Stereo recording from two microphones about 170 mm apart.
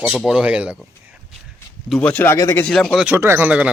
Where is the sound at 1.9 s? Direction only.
5° left (ahead or behind).